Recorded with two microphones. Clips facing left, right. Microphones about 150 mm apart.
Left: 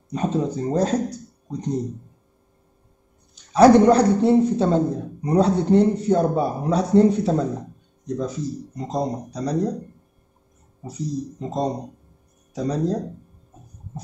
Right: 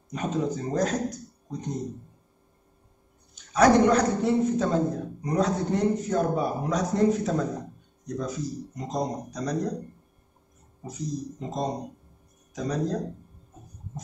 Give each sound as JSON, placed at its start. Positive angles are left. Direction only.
{"t": 0.1, "sound": "a man's voice", "side_deg": 30}
{"t": 3.3, "sound": "a man's voice", "side_deg": 30}
{"t": 10.9, "sound": "a man's voice", "side_deg": 35}